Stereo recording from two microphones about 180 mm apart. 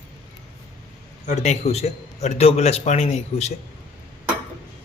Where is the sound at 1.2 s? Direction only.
40° left (ahead or behind).